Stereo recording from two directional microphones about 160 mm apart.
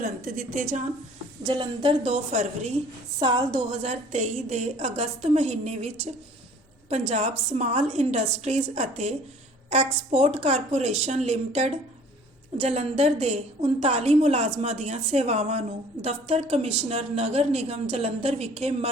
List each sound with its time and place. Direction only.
0.0 s a woman's voice: 55° right (ahead or behind)
1.5 s a woman's voice: 30° right (ahead or behind); by 2.7 s 45° right (ahead or behind)
3.2 s speech: 30° right (ahead or behind)
3.8 s a woman's voice: 45° right (ahead or behind)
7.1 s a woman's voice: 45° right (ahead or behind)